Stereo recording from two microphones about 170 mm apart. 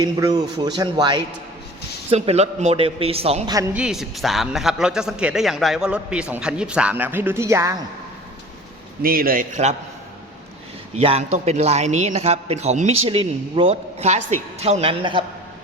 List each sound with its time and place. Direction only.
0.0 s speech: 20° right (ahead or behind)
2.0 s a man's voice: 35° right (ahead or behind)
3.5 s speech: 20° right (ahead or behind)
3.8 s a man's voice: 5° right (ahead or behind)
9.0 s a man's voice: 60° right (ahead or behind)
11.0 s a man's voice: 35° right (ahead or behind)